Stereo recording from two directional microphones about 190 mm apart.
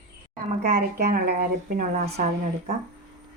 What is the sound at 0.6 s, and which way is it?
Speech, 55° right (ahead or behind).